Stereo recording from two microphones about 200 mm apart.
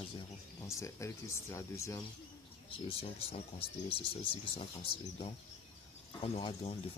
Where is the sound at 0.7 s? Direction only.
15° left (ahead or behind).